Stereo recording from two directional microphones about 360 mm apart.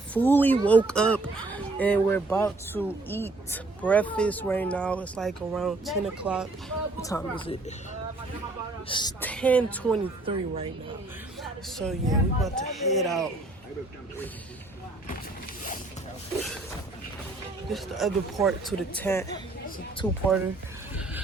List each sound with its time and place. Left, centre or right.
0.1 s speech: centre
8.9 s speech: centre
10.2 s speech: centre
11.8 s speech: centre
17.7 s speech: centre